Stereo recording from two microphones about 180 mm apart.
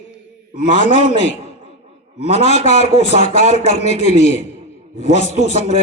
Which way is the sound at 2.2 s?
35° left (ahead or behind).